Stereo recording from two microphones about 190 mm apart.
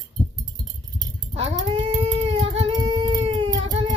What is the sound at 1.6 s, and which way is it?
Cat, 20° right (ahead or behind).